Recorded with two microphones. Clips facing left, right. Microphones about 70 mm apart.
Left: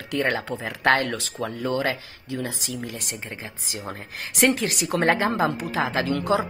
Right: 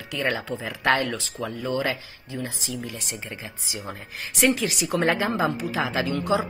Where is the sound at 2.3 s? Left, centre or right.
Left.